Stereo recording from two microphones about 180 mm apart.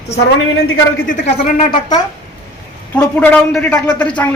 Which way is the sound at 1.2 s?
40° left (ahead or behind).